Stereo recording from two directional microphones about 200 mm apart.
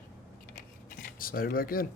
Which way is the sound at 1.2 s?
45° left (ahead or behind).